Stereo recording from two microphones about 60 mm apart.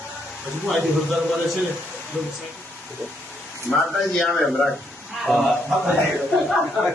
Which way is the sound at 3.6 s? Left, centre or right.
Centre.